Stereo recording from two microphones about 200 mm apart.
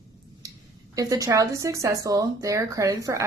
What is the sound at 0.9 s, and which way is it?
Speech, 15° right (ahead or behind).